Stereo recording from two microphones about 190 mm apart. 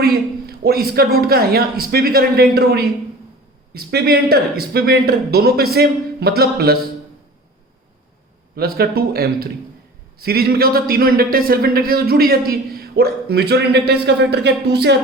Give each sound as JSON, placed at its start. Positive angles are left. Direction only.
{"t": 0.0, "sound": "speech", "side_deg": -55}
{"t": 8.5, "sound": "speech", "side_deg": -55}